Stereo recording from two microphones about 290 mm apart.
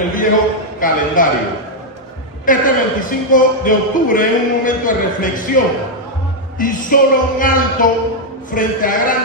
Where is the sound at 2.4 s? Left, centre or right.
Left.